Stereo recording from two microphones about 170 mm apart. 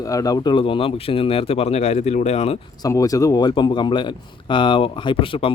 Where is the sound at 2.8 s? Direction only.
20° left (ahead or behind).